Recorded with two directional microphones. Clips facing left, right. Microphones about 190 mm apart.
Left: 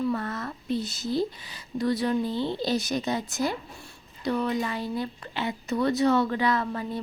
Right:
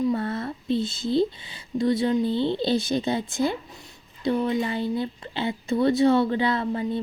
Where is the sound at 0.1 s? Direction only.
30° right (ahead or behind).